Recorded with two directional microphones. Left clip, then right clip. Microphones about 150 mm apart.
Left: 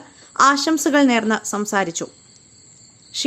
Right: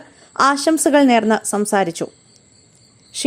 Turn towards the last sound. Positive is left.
turn(degrees=-30)  # may be behind; listen again after turning